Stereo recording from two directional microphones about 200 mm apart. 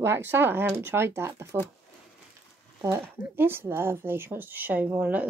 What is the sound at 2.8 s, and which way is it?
Speech, 10° right (ahead or behind).